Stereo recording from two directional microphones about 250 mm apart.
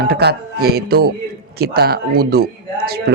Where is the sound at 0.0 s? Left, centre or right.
Right.